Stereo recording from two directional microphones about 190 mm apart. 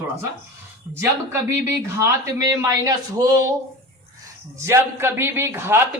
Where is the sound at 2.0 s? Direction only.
15° right (ahead or behind).